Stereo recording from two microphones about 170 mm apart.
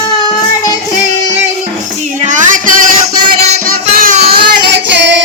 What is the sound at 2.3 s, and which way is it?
Music, 50° right (ahead or behind).